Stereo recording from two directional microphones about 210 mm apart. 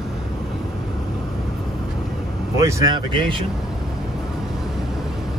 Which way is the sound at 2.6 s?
15° right (ahead or behind).